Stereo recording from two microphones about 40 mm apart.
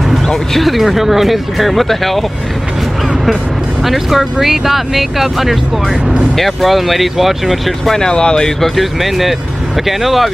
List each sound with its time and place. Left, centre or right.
0.6 s speech: centre
3.8 s speech: centre
7.9 s speech: centre
8.5 s speech: centre